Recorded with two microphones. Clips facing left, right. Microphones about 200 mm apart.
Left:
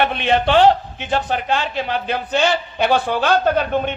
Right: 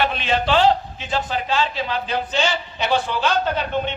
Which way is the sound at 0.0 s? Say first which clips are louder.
Left 4 dB; 60° left (ahead or behind).